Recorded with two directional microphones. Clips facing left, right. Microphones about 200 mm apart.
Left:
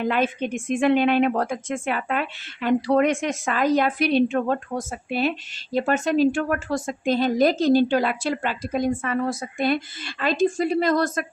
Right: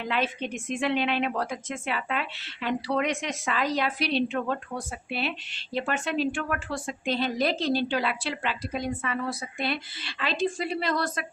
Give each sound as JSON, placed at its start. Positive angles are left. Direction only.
{"t": 0.0, "sound": "a woman's voice", "side_deg": 50}